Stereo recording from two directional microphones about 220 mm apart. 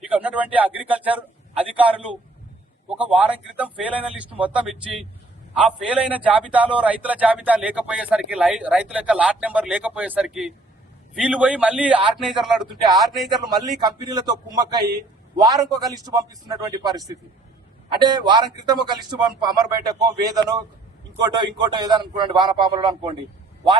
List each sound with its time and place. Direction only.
0.1 s a man's voice: 5° right (ahead or behind)
13.3 s a man's voice: 20° right (ahead or behind)